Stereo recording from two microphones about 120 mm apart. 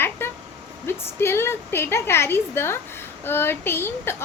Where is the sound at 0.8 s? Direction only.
20° left (ahead or behind).